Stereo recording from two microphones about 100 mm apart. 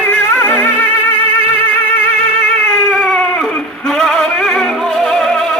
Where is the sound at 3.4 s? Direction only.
5° left (ahead or behind).